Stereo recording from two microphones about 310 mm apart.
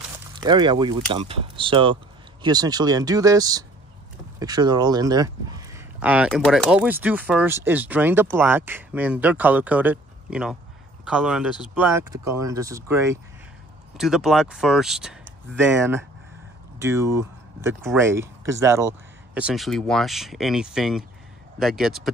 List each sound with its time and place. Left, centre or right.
0.4 s speech: centre